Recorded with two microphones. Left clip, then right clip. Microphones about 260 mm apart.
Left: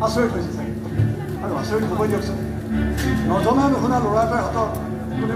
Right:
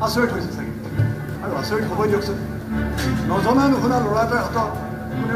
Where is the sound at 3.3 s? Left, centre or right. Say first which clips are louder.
Right 1 dB; right.